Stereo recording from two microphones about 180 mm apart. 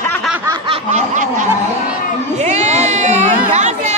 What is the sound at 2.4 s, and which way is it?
Chatter, 40° right (ahead or behind).